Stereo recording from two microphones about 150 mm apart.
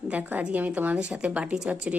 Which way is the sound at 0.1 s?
10° right (ahead or behind).